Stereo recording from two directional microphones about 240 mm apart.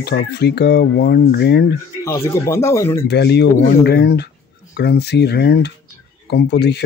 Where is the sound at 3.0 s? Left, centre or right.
Left.